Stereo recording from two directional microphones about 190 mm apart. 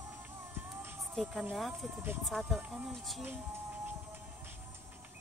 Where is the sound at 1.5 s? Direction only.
Centre (ahead or behind).